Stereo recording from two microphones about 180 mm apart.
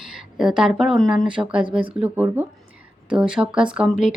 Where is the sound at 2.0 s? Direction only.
10° right (ahead or behind).